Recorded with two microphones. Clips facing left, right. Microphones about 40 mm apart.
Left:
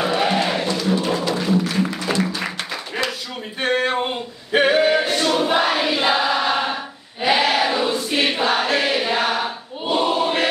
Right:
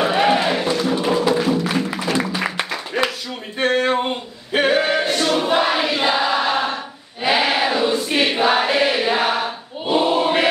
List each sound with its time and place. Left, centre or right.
0.0 s music: centre
0.7 s a sound: centre
2.1 s music: centre
3.6 s a capella: centre
7.2 s choir: centre